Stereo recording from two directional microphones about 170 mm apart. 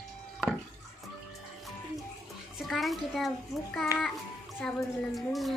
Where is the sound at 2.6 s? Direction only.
Centre (ahead or behind).